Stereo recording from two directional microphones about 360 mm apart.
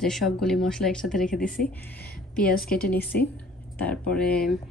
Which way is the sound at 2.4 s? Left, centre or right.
Left.